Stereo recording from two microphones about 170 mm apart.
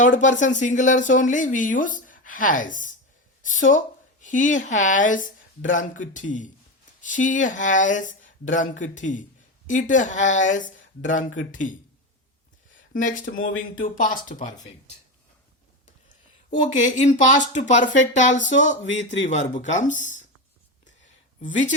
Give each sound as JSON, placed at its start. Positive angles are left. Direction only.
{"t": 0.0, "sound": "speech", "side_deg": 45}
{"t": 12.9, "sound": "speech", "side_deg": 50}
{"t": 16.8, "sound": "speech", "side_deg": 45}